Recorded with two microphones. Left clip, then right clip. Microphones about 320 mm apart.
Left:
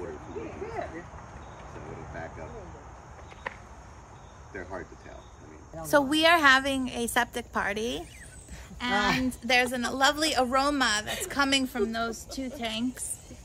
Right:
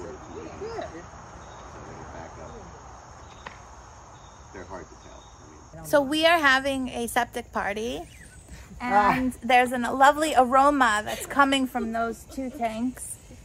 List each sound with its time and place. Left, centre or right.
3.5 s cricket: left
5.9 s a woman's voice: centre